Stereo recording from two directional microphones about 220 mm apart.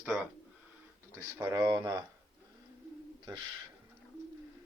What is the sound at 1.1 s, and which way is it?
Speech, 10° right (ahead or behind).